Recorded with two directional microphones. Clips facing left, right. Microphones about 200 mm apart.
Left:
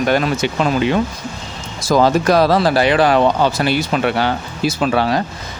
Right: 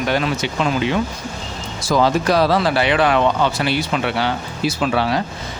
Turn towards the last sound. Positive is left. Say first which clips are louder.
# left 2 dB
turn(degrees=45)  # may be behind; listen again after turning